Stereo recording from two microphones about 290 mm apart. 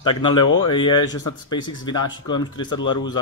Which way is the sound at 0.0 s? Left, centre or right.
Centre.